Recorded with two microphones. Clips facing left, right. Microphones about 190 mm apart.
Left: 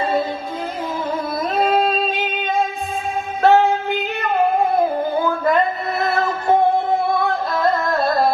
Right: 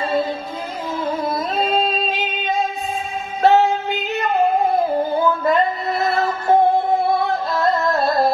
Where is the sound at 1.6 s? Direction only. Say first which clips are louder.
Left 4 dB; 55° left (ahead or behind).